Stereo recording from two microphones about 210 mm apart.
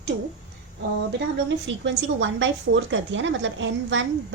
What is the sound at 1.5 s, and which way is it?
A woman's voice, 60° right (ahead or behind).